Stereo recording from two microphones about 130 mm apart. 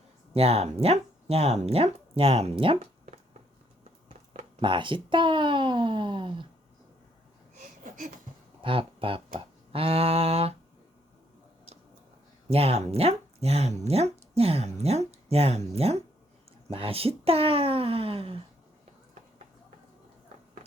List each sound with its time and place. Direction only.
0.3 s speech: 50° right (ahead or behind)
4.6 s speech: 40° right (ahead or behind)
7.9 s a sound: 80° right
8.6 s speech: 40° right (ahead or behind)
12.5 s speech: 50° right (ahead or behind)